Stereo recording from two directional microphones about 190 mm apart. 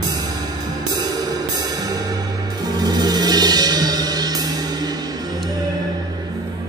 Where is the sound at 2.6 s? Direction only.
20° right (ahead or behind).